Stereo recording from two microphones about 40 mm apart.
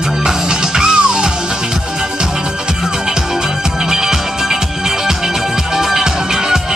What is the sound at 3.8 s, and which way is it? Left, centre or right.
Music, centre.